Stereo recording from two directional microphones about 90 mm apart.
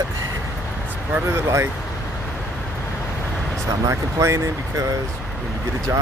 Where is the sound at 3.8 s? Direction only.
35° right (ahead or behind).